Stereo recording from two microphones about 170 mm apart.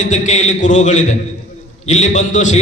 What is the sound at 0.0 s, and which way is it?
A man's voice, 45° left (ahead or behind).